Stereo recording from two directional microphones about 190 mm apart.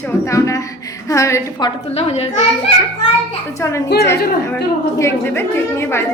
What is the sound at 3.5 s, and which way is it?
Speech, 15° left (ahead or behind).